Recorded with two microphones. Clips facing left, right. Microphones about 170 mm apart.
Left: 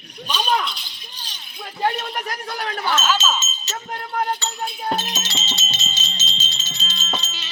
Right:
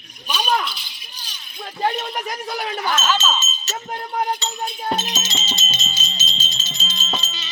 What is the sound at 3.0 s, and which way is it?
Speech, 5° left (ahead or behind).